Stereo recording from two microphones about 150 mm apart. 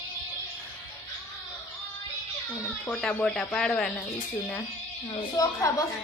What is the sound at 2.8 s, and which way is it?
Speech, 10° left (ahead or behind).